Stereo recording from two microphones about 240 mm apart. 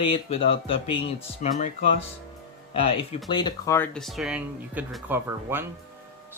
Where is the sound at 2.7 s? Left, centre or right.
Left.